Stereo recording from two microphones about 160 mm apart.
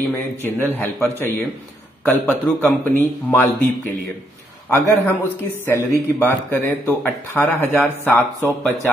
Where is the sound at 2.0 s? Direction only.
10° left (ahead or behind).